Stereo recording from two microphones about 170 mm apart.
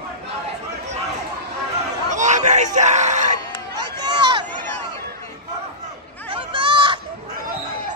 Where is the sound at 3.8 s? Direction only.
25° right (ahead or behind).